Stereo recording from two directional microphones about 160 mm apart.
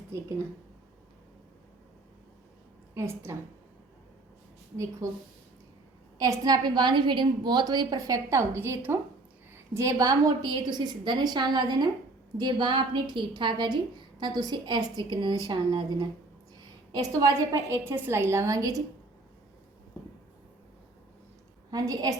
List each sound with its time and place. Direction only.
2.9 s a woman's voice: 15° right (ahead or behind)
5.0 s a woman's voice: 20° right (ahead or behind)
21.7 s a woman's voice: 20° right (ahead or behind)